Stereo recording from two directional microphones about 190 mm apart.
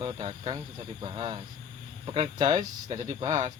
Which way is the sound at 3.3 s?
40° right (ahead or behind).